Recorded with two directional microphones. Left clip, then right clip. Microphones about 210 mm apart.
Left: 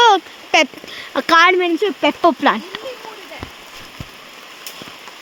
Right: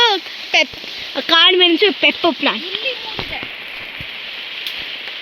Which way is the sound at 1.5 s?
5° right (ahead or behind).